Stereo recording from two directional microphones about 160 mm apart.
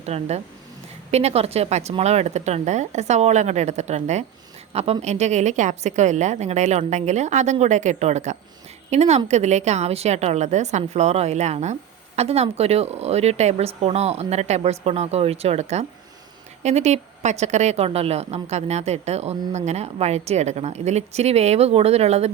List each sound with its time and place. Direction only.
0.0 s a woman's voice: 45° right (ahead or behind)